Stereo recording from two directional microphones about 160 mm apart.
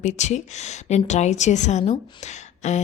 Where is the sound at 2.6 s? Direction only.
45° left (ahead or behind).